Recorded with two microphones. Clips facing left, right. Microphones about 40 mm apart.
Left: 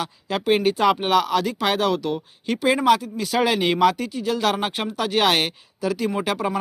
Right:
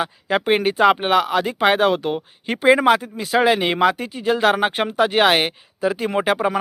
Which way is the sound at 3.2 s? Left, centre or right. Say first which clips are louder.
Right 3 dB; centre.